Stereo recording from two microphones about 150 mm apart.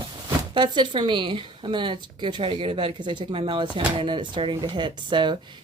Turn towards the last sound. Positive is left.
turn(degrees=-30)  # may be behind; listen again after turning